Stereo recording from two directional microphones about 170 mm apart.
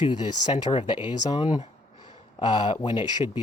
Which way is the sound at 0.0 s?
25° left (ahead or behind).